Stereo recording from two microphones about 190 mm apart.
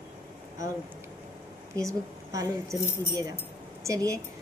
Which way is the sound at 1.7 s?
15° right (ahead or behind).